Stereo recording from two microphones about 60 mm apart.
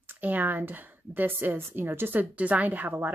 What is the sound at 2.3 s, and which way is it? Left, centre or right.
Speech, right.